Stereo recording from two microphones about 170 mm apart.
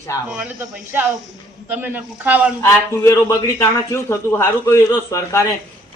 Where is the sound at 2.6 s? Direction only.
15° left (ahead or behind).